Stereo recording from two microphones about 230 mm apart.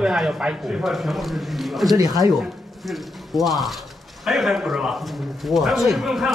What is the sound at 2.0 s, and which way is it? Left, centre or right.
Speech, centre.